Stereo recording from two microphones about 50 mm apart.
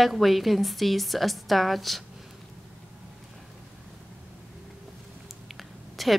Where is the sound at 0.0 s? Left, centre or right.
Centre.